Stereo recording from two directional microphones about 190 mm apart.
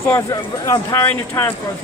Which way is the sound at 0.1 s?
15° left (ahead or behind).